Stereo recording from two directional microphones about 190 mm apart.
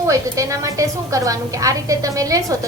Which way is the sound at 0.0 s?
15° right (ahead or behind).